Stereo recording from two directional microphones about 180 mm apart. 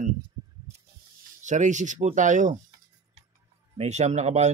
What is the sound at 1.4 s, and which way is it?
Speech, 45° right (ahead or behind).